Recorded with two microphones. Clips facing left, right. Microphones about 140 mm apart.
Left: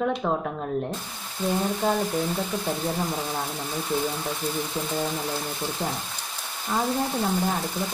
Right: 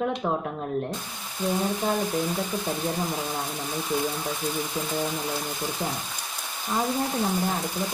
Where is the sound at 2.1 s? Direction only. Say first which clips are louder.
Even; centre (ahead or behind).